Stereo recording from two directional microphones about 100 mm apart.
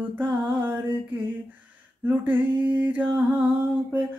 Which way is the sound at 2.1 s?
20° right (ahead or behind).